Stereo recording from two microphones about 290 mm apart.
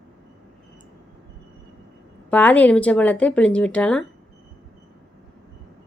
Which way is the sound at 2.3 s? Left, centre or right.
Centre.